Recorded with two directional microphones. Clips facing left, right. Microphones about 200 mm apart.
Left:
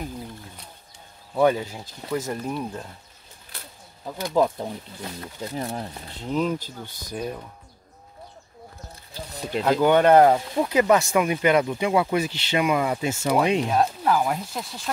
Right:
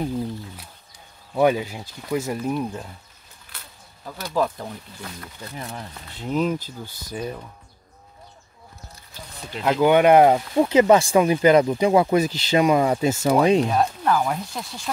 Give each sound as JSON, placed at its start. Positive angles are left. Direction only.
{"t": 1.3, "sound": "speech", "side_deg": -10}
{"t": 4.0, "sound": "speech", "side_deg": 20}
{"t": 5.5, "sound": "speech", "side_deg": 35}
{"t": 6.2, "sound": "speech", "side_deg": -5}
{"t": 9.3, "sound": "a sound", "side_deg": 40}
{"t": 9.7, "sound": "speech", "side_deg": -10}
{"t": 10.6, "sound": "speech", "side_deg": -25}
{"t": 13.6, "sound": "speech", "side_deg": 0}